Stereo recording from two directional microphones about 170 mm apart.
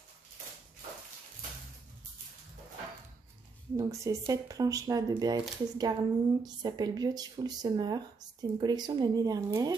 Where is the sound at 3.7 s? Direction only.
20° right (ahead or behind).